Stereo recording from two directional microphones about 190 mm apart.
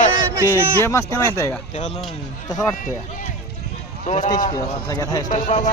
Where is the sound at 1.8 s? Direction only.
35° left (ahead or behind).